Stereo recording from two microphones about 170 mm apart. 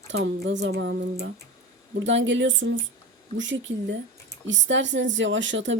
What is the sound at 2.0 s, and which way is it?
A woman's voice, 90° right.